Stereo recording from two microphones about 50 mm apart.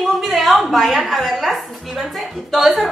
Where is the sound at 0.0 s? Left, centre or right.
Centre.